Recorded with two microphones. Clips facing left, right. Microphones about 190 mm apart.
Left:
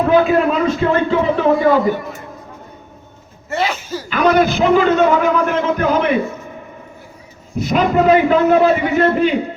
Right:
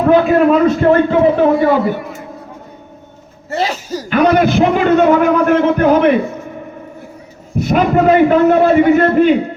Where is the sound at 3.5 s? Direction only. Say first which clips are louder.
Right 2 dB; 40° right (ahead or behind).